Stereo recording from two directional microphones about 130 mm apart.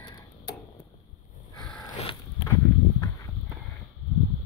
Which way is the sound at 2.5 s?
25° left (ahead or behind).